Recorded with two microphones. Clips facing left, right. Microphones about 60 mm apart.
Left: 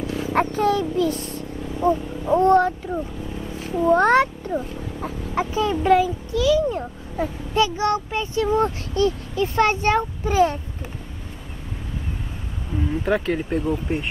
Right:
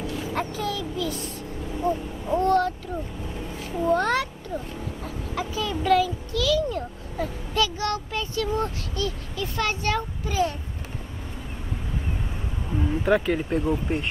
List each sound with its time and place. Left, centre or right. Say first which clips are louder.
0.3 s a child's voice: left 11 dB; left
13.0 s speech: right 1 dB; centre